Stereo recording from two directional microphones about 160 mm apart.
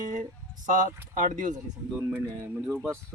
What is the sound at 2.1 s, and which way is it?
Speech, 15° right (ahead or behind).